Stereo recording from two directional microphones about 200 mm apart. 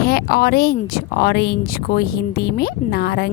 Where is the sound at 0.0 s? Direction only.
50° left (ahead or behind).